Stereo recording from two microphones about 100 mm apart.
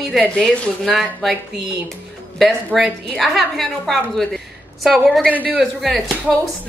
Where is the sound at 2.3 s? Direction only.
Centre (ahead or behind).